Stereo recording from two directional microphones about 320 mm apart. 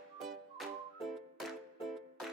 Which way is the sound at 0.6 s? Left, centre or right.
Centre.